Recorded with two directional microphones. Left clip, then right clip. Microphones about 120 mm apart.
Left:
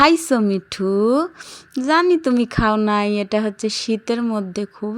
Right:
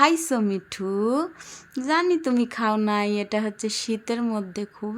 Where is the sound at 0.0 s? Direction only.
45° left (ahead or behind).